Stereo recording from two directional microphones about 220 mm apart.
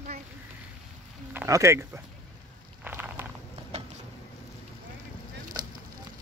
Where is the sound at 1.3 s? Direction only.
15° right (ahead or behind).